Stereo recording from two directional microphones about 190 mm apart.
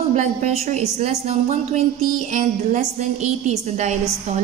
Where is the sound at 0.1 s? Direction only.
35° right (ahead or behind).